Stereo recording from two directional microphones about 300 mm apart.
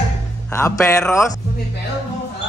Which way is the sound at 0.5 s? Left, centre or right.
Centre.